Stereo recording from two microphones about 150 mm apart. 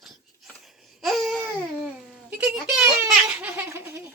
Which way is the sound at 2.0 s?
5° right (ahead or behind).